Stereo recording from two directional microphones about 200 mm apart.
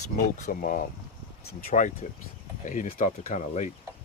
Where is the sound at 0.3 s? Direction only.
40° left (ahead or behind).